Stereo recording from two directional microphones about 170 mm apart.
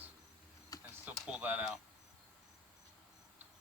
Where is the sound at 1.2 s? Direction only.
5° right (ahead or behind).